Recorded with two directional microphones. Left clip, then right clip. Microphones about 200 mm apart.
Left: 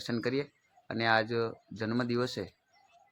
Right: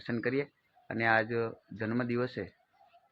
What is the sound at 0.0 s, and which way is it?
Speech, 15° left (ahead or behind).